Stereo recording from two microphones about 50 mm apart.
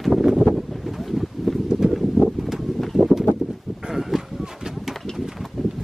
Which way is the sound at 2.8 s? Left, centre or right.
Centre.